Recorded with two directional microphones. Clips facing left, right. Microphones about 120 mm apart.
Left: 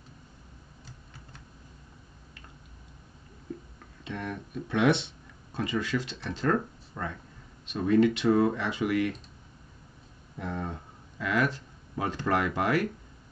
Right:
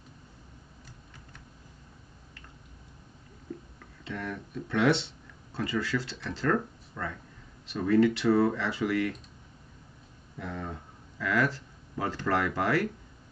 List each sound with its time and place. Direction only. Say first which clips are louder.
4.0 s speech: left 1 dB; 20° left (ahead or behind)
10.3 s speech: left 2 dB; 20° left (ahead or behind)